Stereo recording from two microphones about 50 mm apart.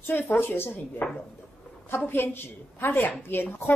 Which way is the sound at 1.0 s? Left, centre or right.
Left.